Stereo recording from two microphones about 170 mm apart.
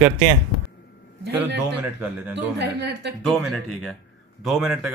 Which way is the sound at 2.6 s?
85° right.